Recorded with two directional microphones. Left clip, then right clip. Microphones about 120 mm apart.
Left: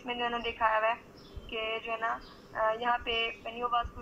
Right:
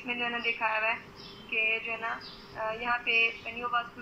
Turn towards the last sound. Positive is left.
turn(degrees=25)  # may be behind; listen again after turning